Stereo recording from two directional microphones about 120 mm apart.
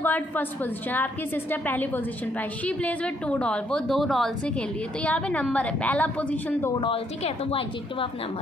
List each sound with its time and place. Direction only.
0.0 s speech: 15° left (ahead or behind)
6.8 s a woman's voice: 50° left (ahead or behind)